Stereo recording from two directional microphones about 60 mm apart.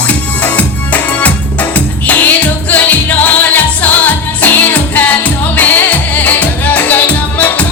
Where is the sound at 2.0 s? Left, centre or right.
Left.